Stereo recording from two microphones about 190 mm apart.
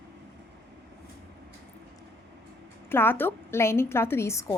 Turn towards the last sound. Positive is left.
turn(degrees=15)  # may be behind; listen again after turning